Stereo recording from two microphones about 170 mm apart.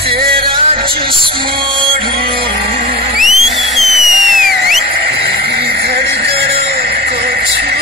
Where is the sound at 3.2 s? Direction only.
Centre (ahead or behind).